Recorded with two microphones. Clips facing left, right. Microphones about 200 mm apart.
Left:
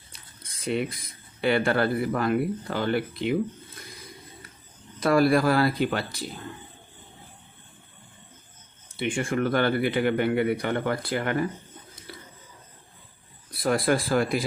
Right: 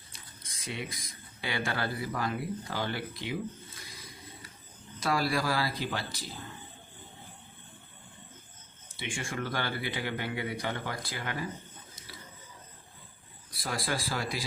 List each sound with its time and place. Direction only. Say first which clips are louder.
0.4 s a sound: left 11 dB; 60° left (ahead or behind)
1.4 s speech: left 11 dB; 60° left (ahead or behind)
4.9 s speech: left 10 dB; 55° left (ahead or behind)
9.0 s speech: left 10 dB; 60° left (ahead or behind)
13.5 s speech: left 11 dB; 60° left (ahead or behind)